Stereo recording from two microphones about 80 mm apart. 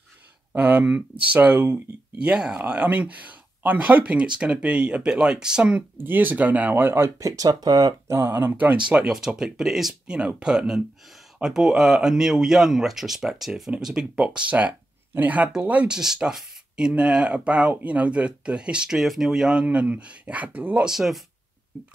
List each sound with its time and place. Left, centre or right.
0.5 s speech: centre
5.9 s speech: right
7.2 s speech: right
8.1 s speech: right
8.8 s speech: centre
16.0 s speech: centre
19.6 s speech: centre
20.8 s speech: centre